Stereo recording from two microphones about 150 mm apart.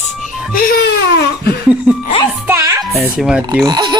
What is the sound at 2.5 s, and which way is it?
Speech, 20° right (ahead or behind).